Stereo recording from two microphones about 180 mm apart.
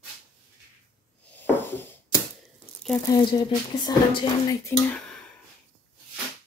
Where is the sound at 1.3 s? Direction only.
10° left (ahead or behind).